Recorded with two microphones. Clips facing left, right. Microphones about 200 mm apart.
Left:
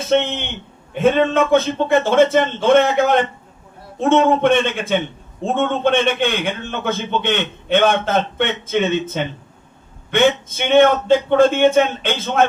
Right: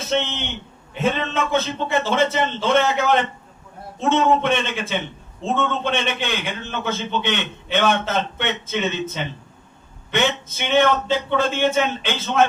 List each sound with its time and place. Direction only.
0.1 s a man's voice: 55° left (ahead or behind)